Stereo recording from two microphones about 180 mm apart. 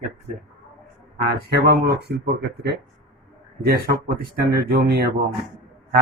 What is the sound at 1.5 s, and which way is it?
Speech, 65° right (ahead or behind).